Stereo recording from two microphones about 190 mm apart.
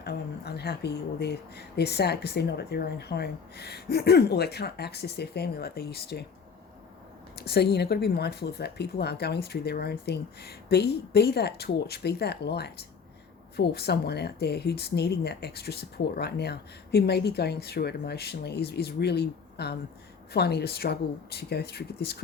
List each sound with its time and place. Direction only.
0.0 s speech: 60° left (ahead or behind)
7.3 s speech: 60° left (ahead or behind)